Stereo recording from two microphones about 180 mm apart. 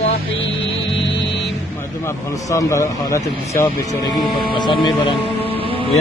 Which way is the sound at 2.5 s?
15° left (ahead or behind).